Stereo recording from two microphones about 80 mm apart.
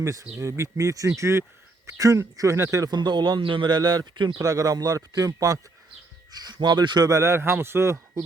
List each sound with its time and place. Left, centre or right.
0.0 s speech: right
2.9 s a man's voice: right
3.8 s a man's voice: right
4.4 s speech: right
6.3 s speech: right
7.1 s speech: right